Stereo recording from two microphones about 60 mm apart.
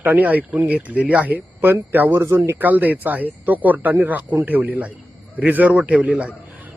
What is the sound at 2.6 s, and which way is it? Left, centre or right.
Speech, right.